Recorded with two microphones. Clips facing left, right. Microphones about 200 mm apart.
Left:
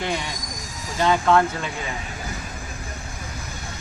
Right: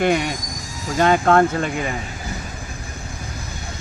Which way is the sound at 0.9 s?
55° right (ahead or behind).